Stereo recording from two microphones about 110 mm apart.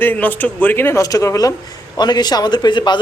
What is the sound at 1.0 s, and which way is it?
A man's voice, 30° left (ahead or behind).